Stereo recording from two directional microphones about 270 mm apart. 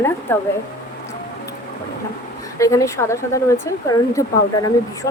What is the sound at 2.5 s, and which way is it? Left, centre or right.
Speech, centre.